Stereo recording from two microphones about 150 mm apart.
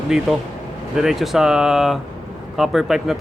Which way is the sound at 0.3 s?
Centre (ahead or behind).